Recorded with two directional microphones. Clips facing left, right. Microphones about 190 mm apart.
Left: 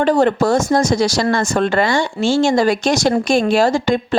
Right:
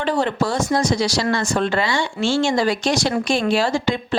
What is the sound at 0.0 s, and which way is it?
Speech, 45° left (ahead or behind).